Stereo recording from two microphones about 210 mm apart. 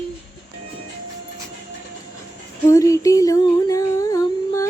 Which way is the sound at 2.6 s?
15° left (ahead or behind).